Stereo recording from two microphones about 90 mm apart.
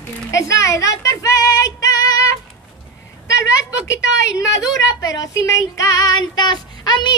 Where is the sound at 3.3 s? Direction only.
35° left (ahead or behind).